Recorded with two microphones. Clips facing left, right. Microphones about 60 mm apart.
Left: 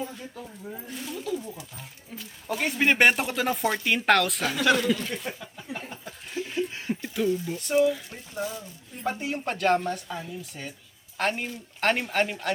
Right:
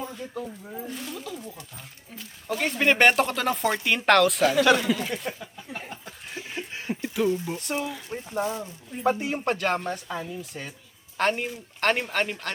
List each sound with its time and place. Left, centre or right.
0.0 s a sound: centre
0.4 s speech: centre
5.4 s a sound: centre
7.3 s speech: centre
7.7 s speech: centre
9.0 s speech: centre